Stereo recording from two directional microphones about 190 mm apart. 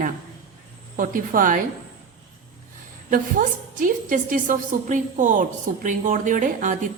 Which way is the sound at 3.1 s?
45° right (ahead or behind).